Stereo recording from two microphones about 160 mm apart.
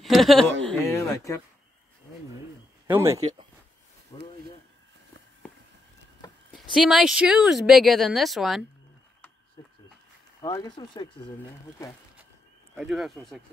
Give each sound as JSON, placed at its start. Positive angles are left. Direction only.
{"t": 0.0, "sound": "speech", "side_deg": 0}
{"t": 0.8, "sound": "speech", "side_deg": 20}
{"t": 2.9, "sound": "speech", "side_deg": -15}
{"t": 3.2, "sound": "speech", "side_deg": -40}
{"t": 4.1, "sound": "a sound", "side_deg": 25}
{"t": 6.7, "sound": "speech", "side_deg": -5}
{"t": 10.4, "sound": "speech", "side_deg": 25}
{"t": 12.7, "sound": "speech", "side_deg": 0}